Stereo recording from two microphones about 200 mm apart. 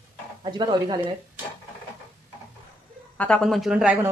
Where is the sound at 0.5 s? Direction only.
20° right (ahead or behind).